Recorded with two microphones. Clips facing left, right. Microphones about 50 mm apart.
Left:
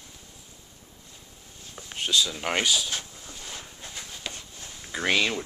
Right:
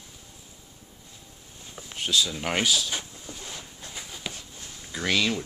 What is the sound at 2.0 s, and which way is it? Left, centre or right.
Speech, centre.